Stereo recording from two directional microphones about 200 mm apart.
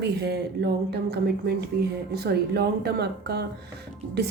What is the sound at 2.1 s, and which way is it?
A woman's voice, 55° right (ahead or behind).